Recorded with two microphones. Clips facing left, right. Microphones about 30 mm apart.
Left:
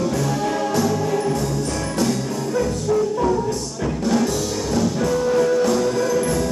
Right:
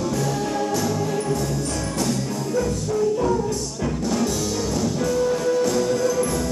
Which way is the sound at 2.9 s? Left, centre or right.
Left.